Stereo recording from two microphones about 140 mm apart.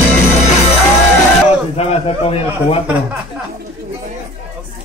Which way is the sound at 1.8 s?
45° left (ahead or behind).